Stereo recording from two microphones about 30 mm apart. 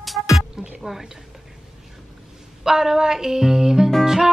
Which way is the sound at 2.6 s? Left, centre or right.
Centre.